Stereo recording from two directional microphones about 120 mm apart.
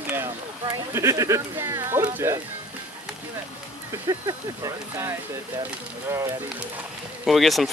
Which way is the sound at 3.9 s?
30° right (ahead or behind).